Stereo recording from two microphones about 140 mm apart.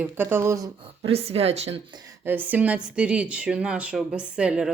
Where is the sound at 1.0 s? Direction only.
45° right (ahead or behind).